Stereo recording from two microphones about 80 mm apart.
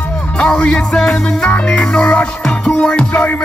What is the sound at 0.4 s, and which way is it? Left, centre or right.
Music, centre.